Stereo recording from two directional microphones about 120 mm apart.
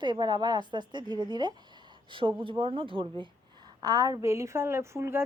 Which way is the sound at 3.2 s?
35° right (ahead or behind).